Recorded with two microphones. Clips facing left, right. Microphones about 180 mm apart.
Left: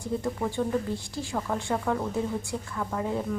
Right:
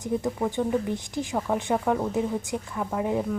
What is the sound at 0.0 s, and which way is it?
Speech, 20° right (ahead or behind).